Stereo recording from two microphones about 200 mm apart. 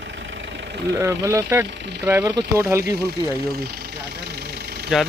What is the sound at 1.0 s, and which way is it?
Speech, 15° right (ahead or behind).